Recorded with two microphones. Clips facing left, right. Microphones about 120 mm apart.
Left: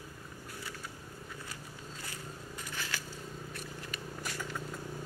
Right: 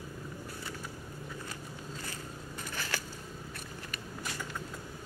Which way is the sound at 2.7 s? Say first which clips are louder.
Right 3 dB; 50° right (ahead or behind).